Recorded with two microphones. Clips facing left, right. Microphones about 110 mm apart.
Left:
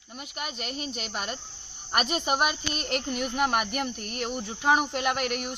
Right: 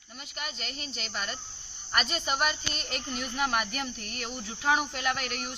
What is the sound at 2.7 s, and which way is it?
Speech, 60° left (ahead or behind).